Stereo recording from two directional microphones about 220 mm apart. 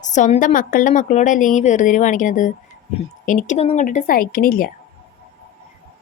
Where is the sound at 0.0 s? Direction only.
35° left (ahead or behind).